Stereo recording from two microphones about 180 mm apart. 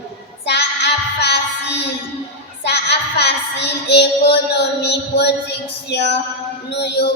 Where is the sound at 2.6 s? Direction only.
70° left (ahead or behind).